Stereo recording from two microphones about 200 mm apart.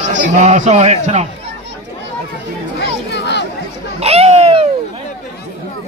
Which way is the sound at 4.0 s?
30° right (ahead or behind).